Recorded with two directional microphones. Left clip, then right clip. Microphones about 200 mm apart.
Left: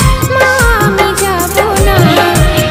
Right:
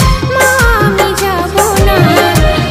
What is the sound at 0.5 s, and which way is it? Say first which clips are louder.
Music: even; centre (ahead or behind).